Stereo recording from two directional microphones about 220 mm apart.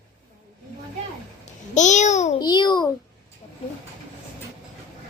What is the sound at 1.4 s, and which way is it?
Babbling, 35° left (ahead or behind).